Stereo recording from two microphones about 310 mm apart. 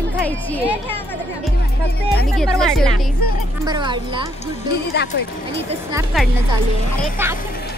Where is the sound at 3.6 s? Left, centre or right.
Centre.